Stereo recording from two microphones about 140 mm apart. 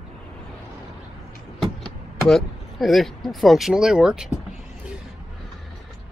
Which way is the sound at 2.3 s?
Centre (ahead or behind).